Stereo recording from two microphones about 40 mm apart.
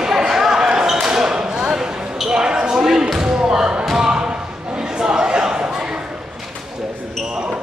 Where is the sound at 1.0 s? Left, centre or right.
Centre.